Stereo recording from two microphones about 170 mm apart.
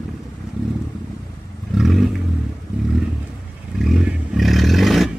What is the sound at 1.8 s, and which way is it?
Vehicle, centre (ahead or behind).